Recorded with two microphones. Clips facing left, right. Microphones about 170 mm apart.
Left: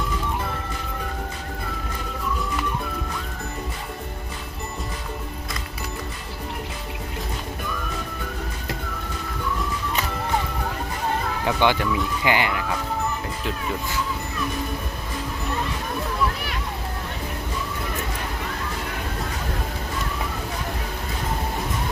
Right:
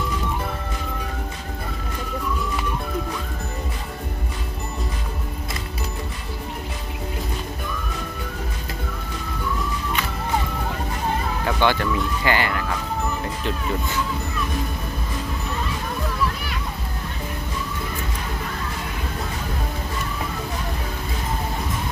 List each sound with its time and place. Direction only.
11.4 s speech: 15° left (ahead or behind)